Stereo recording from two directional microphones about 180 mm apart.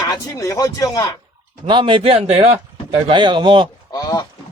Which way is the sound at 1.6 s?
25° right (ahead or behind).